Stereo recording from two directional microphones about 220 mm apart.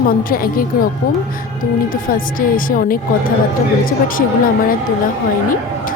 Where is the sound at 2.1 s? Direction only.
40° left (ahead or behind).